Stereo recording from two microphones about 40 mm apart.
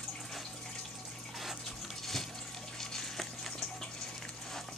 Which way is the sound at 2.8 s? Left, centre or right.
Centre.